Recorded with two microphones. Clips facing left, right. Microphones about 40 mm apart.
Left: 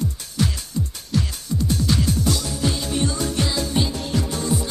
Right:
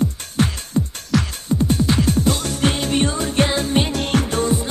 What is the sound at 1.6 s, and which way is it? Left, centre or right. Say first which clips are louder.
Music: right 3 dB; right.